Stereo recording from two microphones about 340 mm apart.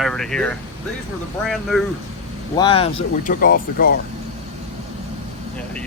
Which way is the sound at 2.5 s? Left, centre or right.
Centre.